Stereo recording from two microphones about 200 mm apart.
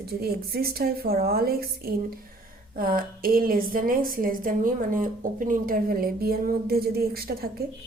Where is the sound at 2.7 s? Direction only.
45° right (ahead or behind).